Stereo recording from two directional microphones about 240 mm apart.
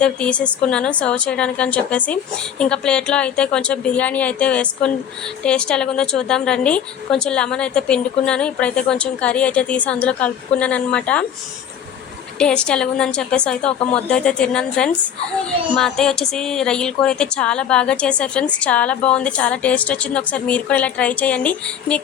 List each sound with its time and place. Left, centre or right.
0.0 s a woman's voice: centre
12.4 s a woman's voice: centre